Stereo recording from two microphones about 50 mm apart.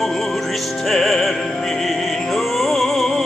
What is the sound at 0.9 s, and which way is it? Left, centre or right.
Music, centre.